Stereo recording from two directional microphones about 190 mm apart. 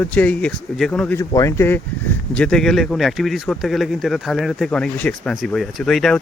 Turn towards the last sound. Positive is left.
turn(degrees=0)  # may be behind; listen again after turning